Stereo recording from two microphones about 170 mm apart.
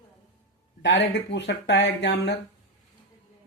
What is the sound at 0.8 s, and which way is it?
Speech, 90° left.